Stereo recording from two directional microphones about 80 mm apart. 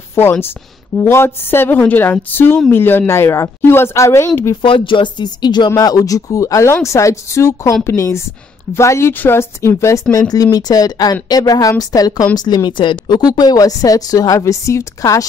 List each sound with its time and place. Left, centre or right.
0.1 s a woman's voice: left
4.6 s speech: left
5.8 s speech: left
10.1 s a woman's voice: left
12.4 s speech: left
13.3 s a woman's voice: left